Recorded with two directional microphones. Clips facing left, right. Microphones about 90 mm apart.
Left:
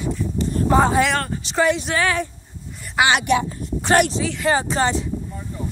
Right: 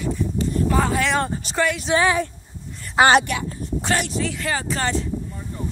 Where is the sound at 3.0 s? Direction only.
40° right (ahead or behind).